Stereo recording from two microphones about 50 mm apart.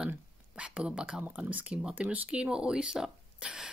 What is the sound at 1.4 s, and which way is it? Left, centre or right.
Speech, right.